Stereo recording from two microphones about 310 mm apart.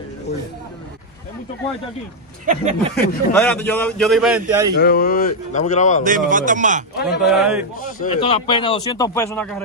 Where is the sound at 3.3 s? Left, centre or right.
Centre.